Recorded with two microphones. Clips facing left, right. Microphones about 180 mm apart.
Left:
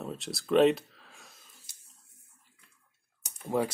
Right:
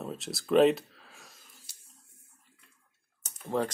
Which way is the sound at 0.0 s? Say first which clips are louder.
Even; centre (ahead or behind).